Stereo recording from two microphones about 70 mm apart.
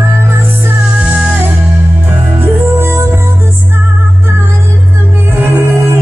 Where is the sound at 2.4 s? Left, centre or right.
Right.